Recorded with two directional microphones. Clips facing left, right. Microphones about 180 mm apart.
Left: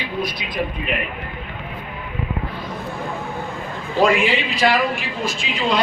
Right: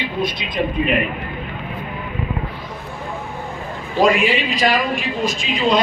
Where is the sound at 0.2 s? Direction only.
25° right (ahead or behind).